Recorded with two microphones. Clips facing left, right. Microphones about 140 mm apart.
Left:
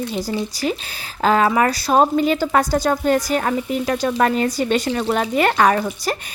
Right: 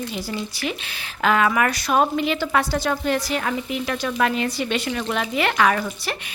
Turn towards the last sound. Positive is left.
turn(degrees=40)  # may be behind; listen again after turning